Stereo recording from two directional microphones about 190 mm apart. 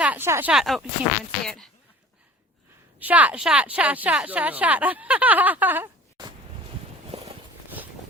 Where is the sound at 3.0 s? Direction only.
10° right (ahead or behind).